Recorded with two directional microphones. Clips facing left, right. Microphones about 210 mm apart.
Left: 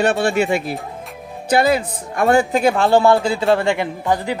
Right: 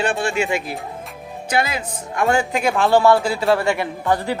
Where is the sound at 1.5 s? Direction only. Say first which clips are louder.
Left 7 dB; 35° left (ahead or behind); by 4.4 s 15° left (ahead or behind).